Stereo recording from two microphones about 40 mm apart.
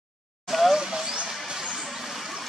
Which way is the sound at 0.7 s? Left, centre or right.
Centre.